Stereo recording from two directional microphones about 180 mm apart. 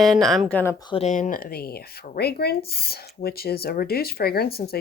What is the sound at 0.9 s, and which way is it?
Speech, 35° left (ahead or behind).